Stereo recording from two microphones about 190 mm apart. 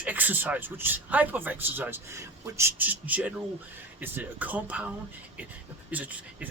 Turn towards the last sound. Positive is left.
turn(degrees=-5)  # may be behind; listen again after turning